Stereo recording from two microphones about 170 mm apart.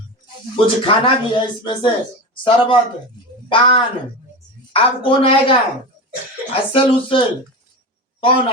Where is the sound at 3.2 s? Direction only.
25° left (ahead or behind).